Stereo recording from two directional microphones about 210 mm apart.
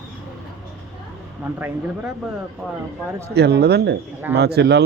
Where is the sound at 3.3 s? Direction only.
50° right (ahead or behind).